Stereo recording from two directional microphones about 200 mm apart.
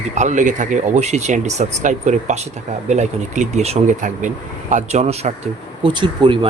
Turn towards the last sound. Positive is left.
turn(degrees=-25)  # may be behind; listen again after turning